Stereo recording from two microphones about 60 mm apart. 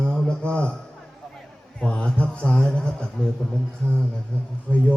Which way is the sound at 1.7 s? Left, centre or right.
Centre.